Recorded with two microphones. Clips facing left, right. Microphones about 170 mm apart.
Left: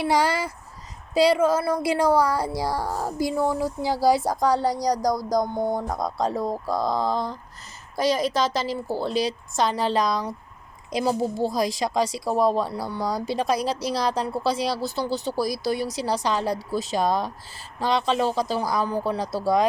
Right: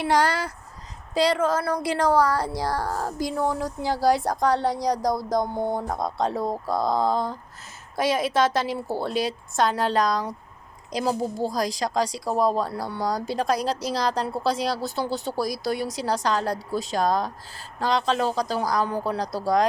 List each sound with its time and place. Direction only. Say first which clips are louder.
0.0 s a woman's voice: even; 10° left (ahead or behind)
10.9 s a woman's voice: left 2 dB; 35° right (ahead or behind)
11.8 s a woman's voice: left 1 dB; 5° left (ahead or behind)